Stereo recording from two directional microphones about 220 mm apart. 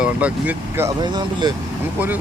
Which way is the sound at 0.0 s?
5° right (ahead or behind).